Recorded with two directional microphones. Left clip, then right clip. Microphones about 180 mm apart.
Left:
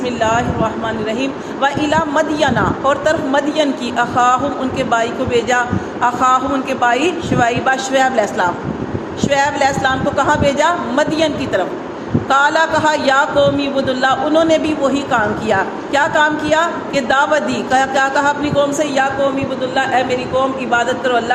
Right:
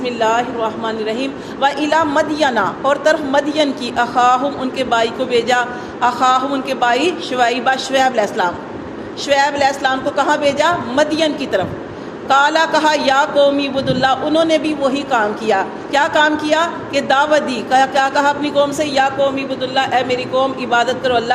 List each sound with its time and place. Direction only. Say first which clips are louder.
0.0 s a man's voice: even; 45° right (ahead or behind)
19.7 s a man's voice: even; 55° right (ahead or behind)